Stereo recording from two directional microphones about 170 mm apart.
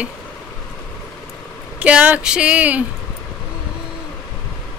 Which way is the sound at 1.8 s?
5° right (ahead or behind).